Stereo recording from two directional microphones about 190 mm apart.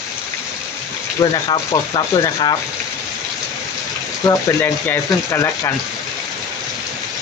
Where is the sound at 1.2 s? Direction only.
25° left (ahead or behind).